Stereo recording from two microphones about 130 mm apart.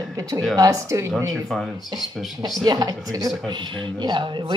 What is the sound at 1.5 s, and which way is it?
Speech, centre (ahead or behind).